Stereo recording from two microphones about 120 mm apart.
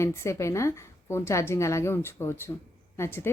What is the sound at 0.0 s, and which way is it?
A woman's voice, 25° left (ahead or behind).